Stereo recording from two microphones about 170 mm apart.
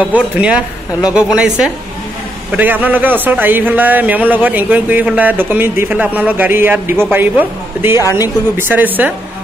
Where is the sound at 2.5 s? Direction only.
10° right (ahead or behind).